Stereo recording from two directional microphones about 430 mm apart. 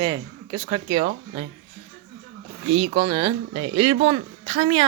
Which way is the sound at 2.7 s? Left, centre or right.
Centre.